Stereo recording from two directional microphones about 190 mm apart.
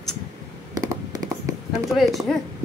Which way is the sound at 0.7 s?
20° right (ahead or behind).